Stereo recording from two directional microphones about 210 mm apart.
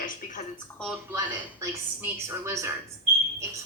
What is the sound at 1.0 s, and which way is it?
A woman's voice, 15° right (ahead or behind).